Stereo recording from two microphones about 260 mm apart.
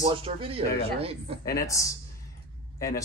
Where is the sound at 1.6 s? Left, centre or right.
Centre.